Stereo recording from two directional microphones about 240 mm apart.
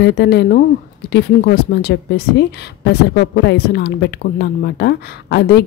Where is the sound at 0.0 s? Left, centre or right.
Left.